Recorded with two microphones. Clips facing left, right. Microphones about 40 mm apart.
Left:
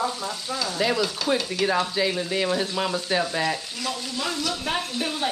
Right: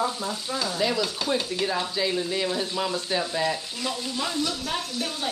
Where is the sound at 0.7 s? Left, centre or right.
Centre.